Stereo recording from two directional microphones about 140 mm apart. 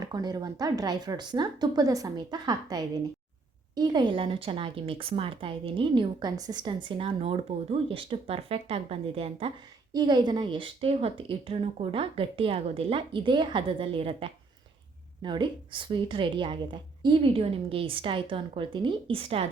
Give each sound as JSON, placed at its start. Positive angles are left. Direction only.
{"t": 0.0, "sound": "a woman's voice", "side_deg": -30}
{"t": 9.9, "sound": "speech", "side_deg": -30}